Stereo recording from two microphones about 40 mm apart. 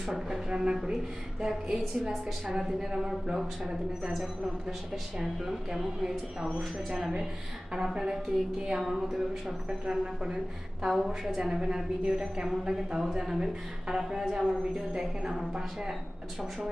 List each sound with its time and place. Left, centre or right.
0.1 s a woman's voice: centre
0.5 s a woman's voice: centre
5.2 s a woman's voice: centre
7.9 s a woman's voice: centre
12.0 s a woman's voice: right